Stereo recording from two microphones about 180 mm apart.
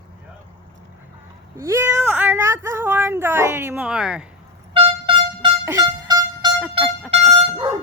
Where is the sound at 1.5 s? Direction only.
15° right (ahead or behind).